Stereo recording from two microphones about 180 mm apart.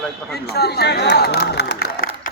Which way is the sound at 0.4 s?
65° left (ahead or behind).